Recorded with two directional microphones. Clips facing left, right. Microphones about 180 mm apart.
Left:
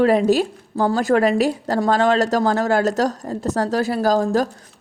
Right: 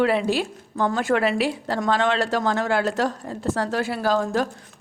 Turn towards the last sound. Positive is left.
turn(degrees=40)  # may be behind; listen again after turning